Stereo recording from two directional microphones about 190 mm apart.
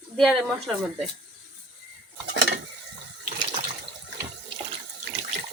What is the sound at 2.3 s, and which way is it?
Stir, 65° right (ahead or behind).